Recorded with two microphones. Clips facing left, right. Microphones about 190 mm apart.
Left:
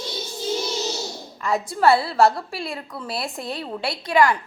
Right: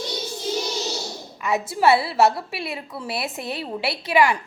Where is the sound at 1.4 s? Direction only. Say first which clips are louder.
Even; 5° right (ahead or behind).